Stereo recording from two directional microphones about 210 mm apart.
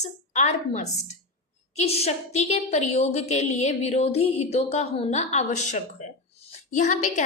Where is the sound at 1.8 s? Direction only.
30° left (ahead or behind).